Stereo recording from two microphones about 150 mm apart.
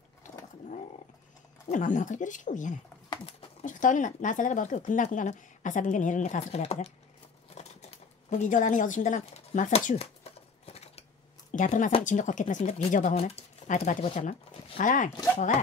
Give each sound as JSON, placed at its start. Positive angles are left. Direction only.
{"t": 0.2, "sound": "vehicle", "side_deg": 55}
{"t": 1.7, "sound": "speech", "side_deg": 55}
{"t": 7.4, "sound": "computer keyboard", "side_deg": 50}
{"t": 11.5, "sound": "speech", "side_deg": 55}